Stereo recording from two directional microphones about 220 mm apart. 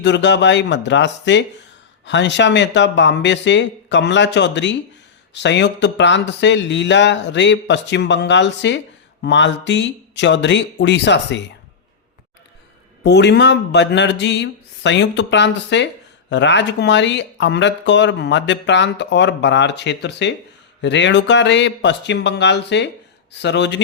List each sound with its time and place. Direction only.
0.0 s speech: 55° left (ahead or behind)
13.0 s speech: 50° left (ahead or behind)